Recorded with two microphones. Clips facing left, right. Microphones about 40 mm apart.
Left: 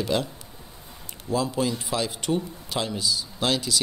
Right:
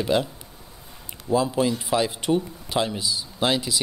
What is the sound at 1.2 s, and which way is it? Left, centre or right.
Speech, centre.